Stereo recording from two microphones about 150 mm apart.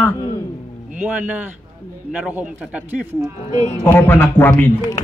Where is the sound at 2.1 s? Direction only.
5° right (ahead or behind).